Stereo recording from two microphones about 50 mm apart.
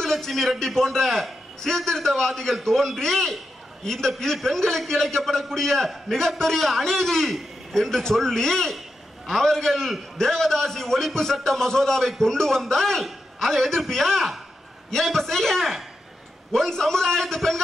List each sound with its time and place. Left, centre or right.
0.0 s a man's voice: centre